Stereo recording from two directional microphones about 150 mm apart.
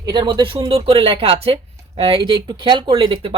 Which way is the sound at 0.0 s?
30° right (ahead or behind).